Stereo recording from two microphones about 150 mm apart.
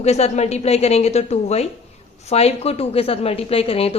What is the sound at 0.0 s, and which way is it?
A woman's voice, 45° left (ahead or behind).